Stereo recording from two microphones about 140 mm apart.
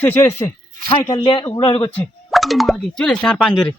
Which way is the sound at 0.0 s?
15° left (ahead or behind).